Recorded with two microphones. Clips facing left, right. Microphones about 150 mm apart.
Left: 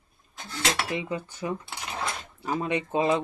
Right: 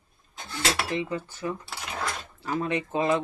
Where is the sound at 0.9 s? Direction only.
15° left (ahead or behind).